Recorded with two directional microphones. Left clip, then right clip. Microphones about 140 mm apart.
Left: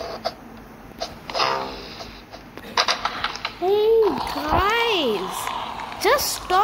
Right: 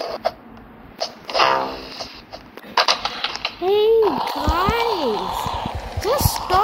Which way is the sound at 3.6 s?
20° right (ahead or behind).